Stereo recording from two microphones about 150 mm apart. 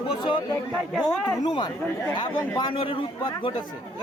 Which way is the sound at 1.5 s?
30° left (ahead or behind).